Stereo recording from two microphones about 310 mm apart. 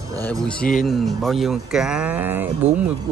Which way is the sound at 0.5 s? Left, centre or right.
Left.